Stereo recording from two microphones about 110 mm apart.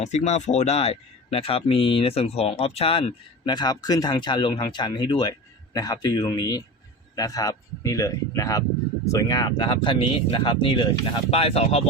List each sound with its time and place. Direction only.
0.0 s speech: 90° left; by 3.1 s 60° left (ahead or behind)
3.4 s speech: 40° left (ahead or behind); by 11.8 s 65° left (ahead or behind)